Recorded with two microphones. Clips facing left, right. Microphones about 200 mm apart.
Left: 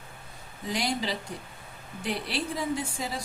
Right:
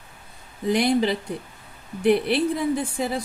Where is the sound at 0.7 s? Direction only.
60° right (ahead or behind).